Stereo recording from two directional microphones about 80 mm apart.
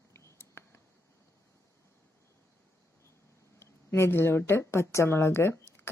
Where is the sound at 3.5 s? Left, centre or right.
Left.